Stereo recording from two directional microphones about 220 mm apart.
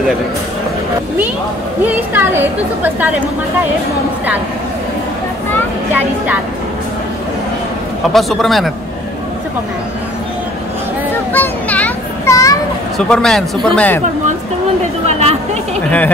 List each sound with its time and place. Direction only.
1.9 s a woman's voice: 10° right (ahead or behind)
8.1 s a man's voice: centre (ahead or behind)
11.3 s children playing: 5° left (ahead or behind)
12.9 s a man's voice: centre (ahead or behind)
15.0 s speech: 30° right (ahead or behind)